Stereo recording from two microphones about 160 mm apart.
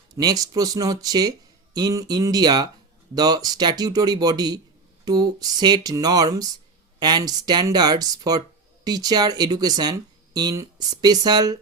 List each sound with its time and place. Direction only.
0.2 s speech: 25° right (ahead or behind)